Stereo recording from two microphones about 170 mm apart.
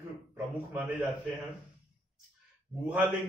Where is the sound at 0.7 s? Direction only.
10° right (ahead or behind).